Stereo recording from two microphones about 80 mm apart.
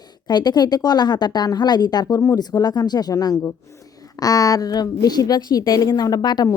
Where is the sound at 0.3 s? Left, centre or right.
Left.